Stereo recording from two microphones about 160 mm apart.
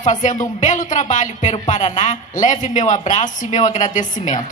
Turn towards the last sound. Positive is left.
turn(degrees=50)  # may be behind; listen again after turning